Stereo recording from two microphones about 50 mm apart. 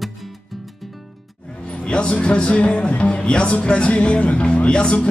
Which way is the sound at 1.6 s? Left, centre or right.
Left.